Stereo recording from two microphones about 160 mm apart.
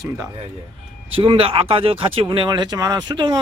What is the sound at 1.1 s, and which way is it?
A man's voice, 35° right (ahead or behind).